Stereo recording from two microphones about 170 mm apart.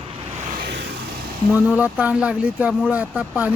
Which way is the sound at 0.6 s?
85° right.